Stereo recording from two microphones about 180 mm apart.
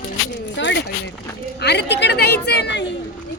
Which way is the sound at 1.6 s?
65° left (ahead or behind).